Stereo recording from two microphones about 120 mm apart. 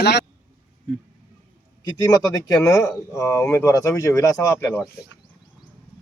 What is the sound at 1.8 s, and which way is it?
Speech, 30° left (ahead or behind).